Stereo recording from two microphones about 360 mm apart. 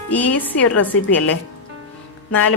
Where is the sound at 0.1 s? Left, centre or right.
Centre.